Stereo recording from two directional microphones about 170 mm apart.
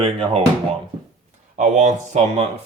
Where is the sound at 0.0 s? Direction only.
35° right (ahead or behind).